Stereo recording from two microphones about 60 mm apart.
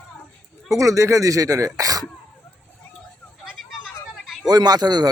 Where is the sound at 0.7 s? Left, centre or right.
Right.